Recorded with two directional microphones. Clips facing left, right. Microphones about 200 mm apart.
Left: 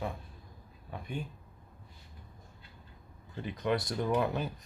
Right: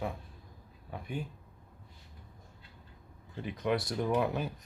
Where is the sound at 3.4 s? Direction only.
5° right (ahead or behind).